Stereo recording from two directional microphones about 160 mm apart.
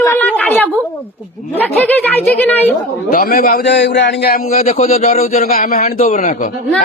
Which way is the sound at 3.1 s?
65° left (ahead or behind).